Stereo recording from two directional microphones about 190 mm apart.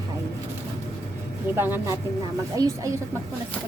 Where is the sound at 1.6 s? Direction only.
10° right (ahead or behind).